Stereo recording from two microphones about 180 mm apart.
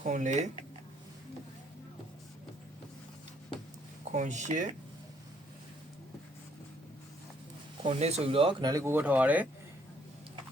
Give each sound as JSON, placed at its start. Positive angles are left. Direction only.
{"t": 0.0, "sound": "speech", "side_deg": -40}
{"t": 4.1, "sound": "speech", "side_deg": -40}
{"t": 7.9, "sound": "speech", "side_deg": -35}